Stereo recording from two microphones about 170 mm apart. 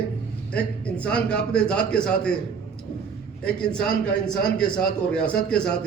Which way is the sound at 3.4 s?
5° left (ahead or behind).